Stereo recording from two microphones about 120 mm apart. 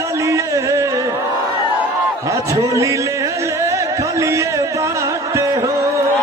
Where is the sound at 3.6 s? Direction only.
25° right (ahead or behind).